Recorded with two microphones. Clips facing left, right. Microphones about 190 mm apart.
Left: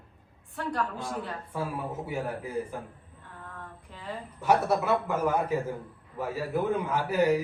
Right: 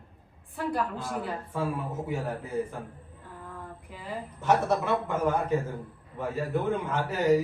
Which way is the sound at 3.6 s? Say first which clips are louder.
Right 2 dB; 10° right (ahead or behind).